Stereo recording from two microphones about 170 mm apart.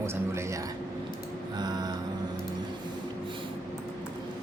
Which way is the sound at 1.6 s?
25° right (ahead or behind).